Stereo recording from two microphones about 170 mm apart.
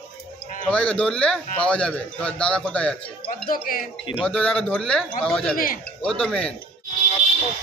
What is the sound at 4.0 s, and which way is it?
Speech, 30° left (ahead or behind).